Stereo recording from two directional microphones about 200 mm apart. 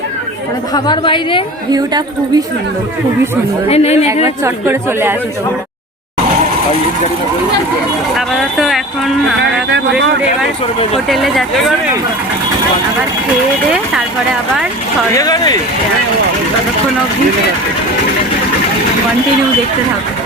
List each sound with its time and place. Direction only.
0.7 s a woman's voice: 20° left (ahead or behind)
1.7 s speech: 20° right (ahead or behind)
3.7 s speech: 30° left (ahead or behind)
4.1 s a woman's voice: 15° right (ahead or behind)
8.1 s speech: centre (ahead or behind)
11.1 s speech: centre (ahead or behind)
15.1 s a woman's voice: 20° left (ahead or behind)